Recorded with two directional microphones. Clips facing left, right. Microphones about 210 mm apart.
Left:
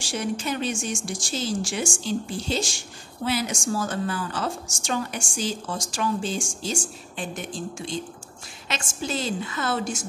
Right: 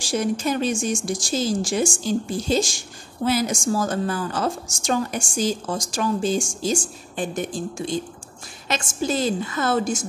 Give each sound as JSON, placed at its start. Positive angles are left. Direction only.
{"t": 0.1, "sound": "a woman's voice", "side_deg": -40}